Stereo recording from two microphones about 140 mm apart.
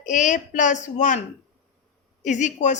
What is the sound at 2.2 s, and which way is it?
Speech, 60° left (ahead or behind).